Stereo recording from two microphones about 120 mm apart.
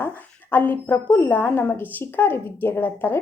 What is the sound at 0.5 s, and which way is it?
Speech, 15° left (ahead or behind).